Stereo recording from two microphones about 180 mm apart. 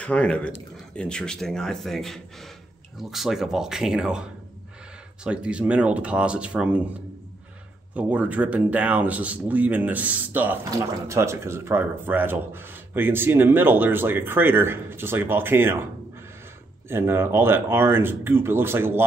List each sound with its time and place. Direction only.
0.0 s speech: 5° left (ahead or behind)
7.9 s speech: 10° right (ahead or behind)
16.9 s speech: 15° right (ahead or behind)